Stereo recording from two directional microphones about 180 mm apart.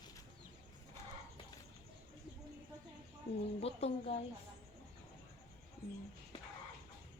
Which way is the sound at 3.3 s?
35° left (ahead or behind).